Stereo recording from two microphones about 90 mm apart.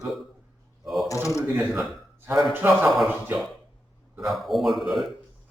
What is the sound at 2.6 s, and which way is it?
Speech, 25° right (ahead or behind).